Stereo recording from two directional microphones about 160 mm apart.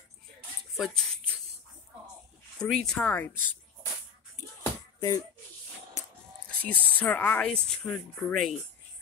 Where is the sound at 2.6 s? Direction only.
5° left (ahead or behind).